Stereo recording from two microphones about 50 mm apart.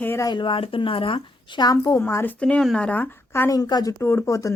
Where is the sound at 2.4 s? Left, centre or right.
Left.